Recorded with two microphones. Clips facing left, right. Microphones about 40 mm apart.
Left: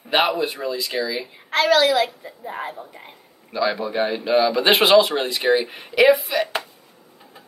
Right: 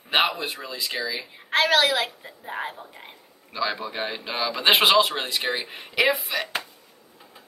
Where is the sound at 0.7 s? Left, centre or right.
Centre.